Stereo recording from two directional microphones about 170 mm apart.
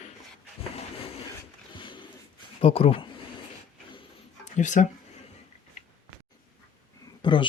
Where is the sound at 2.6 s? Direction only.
35° left (ahead or behind).